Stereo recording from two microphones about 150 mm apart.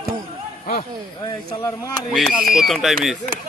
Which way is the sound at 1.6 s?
20° left (ahead or behind).